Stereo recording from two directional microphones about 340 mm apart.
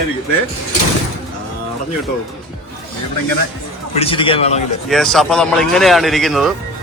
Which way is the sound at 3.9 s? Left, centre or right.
Centre.